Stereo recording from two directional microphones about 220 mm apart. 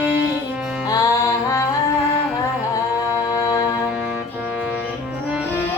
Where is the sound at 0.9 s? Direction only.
15° left (ahead or behind).